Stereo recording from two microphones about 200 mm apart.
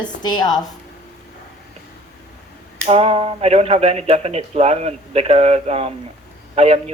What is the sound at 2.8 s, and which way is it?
Speech, 30° right (ahead or behind).